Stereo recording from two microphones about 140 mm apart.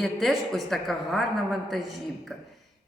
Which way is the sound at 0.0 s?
Centre (ahead or behind).